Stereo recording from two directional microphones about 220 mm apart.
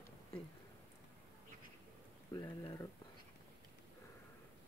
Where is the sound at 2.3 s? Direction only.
15° left (ahead or behind).